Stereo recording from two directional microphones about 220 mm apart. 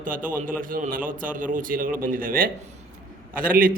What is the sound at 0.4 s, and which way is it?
A man's voice, 40° right (ahead or behind).